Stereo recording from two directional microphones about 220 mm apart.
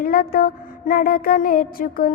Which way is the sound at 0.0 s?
40° left (ahead or behind).